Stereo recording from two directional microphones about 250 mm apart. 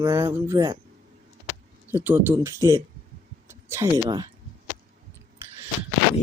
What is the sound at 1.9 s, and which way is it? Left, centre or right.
Speech, centre.